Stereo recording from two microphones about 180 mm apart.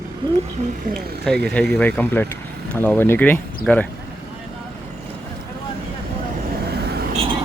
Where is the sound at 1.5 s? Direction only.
5° left (ahead or behind).